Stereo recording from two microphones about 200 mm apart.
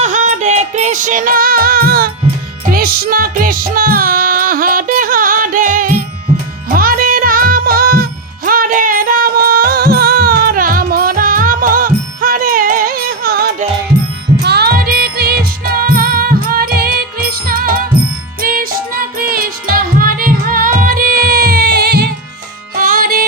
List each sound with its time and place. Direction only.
0.0 s music: 40° right (ahead or behind)